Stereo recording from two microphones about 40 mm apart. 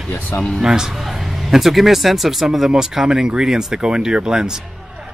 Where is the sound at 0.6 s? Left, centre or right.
Centre.